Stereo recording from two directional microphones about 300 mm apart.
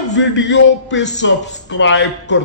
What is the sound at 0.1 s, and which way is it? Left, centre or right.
A man's voice, left.